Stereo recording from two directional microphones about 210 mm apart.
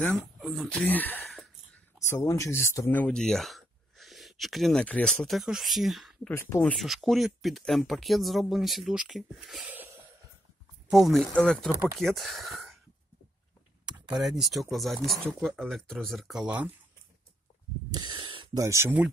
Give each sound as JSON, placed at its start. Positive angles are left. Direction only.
{"t": 0.0, "sound": "speech", "side_deg": 5}
{"t": 10.9, "sound": "speech", "side_deg": 0}
{"t": 14.2, "sound": "speech", "side_deg": 0}
{"t": 17.9, "sound": "speech", "side_deg": -20}